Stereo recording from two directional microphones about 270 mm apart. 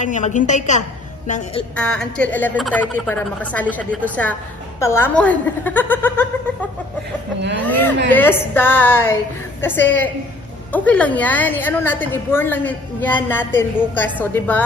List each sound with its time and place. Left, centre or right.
0.0 s a woman's voice: left
1.8 s a woman's voice: centre
7.6 s a woman's voice: centre